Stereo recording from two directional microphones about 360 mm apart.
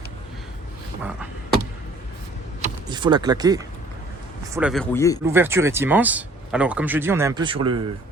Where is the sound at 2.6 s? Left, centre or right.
Centre.